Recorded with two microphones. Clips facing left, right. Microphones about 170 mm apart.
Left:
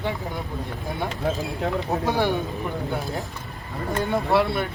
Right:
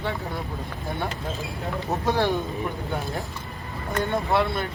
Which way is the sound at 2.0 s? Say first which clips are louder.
Right 1 dB; 15° left (ahead or behind).